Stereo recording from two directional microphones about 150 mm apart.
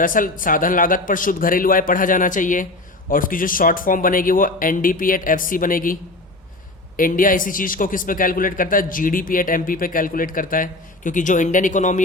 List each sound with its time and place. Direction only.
0.0 s a man's voice: 65° left (ahead or behind)